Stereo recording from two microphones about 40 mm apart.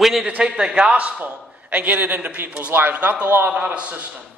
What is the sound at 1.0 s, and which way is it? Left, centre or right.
A man's voice, right.